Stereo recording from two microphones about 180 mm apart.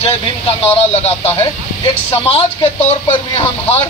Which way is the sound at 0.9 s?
35° left (ahead or behind).